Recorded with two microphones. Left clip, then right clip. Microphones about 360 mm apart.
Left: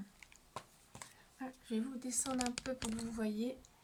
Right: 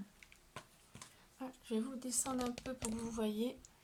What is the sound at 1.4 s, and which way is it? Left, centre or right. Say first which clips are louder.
Speech: right 1 dB; centre.